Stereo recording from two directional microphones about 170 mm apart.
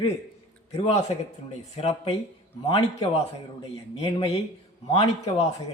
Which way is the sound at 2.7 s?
30° left (ahead or behind).